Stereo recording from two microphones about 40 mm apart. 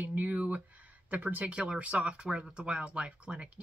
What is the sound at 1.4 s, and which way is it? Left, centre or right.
Speech, right.